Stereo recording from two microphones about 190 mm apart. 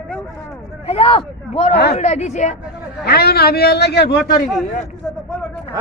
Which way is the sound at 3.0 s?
55° left (ahead or behind).